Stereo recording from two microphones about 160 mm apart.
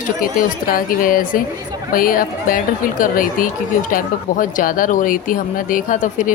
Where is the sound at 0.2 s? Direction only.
65° left (ahead or behind).